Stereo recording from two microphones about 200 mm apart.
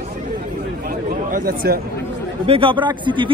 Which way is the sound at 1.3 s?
45° right (ahead or behind).